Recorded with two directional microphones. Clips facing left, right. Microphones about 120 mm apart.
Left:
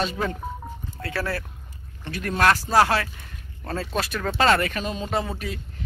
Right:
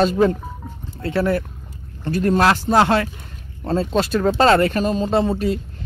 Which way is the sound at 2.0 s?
35° right (ahead or behind).